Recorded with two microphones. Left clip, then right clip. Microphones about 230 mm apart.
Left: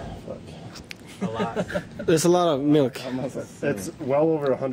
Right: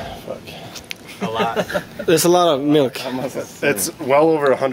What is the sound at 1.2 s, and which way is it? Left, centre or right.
Speech, centre.